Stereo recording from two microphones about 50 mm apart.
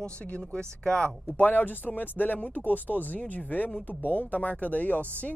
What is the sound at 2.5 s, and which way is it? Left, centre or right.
Speech, right.